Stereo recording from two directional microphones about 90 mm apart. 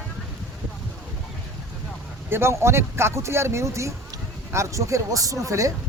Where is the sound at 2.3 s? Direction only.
30° right (ahead or behind).